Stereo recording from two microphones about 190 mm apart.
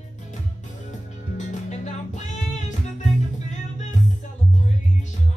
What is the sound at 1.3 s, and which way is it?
Music, 40° left (ahead or behind).